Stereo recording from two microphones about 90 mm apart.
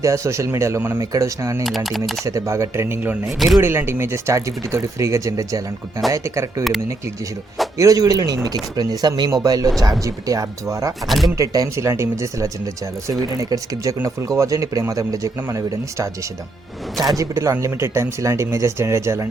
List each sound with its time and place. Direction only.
0.0 s speech: 35° right (ahead or behind)
1.6 s speech: centre (ahead or behind)
2.2 s speech: 35° right (ahead or behind)
3.2 s speech: centre (ahead or behind)
3.6 s speech: 25° right (ahead or behind)
7.8 s speech: 40° right (ahead or behind)
11.0 s speech: centre (ahead or behind)
11.3 s speech: 40° right (ahead or behind)
17.2 s speech: 35° right (ahead or behind)